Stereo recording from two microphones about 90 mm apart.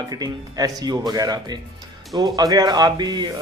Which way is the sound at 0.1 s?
45° right (ahead or behind).